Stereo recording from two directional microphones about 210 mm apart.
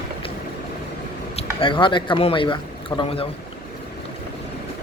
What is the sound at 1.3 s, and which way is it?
Speech, 25° left (ahead or behind).